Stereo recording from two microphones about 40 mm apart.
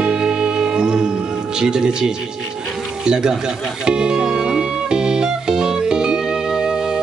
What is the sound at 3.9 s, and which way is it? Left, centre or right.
Music, centre.